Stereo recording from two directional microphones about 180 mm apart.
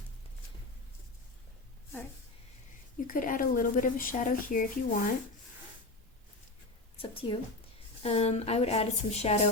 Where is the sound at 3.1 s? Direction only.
50° left (ahead or behind).